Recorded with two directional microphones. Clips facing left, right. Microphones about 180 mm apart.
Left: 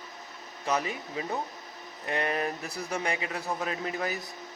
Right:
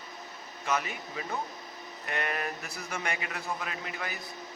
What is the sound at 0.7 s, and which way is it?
A man's voice, 35° left (ahead or behind).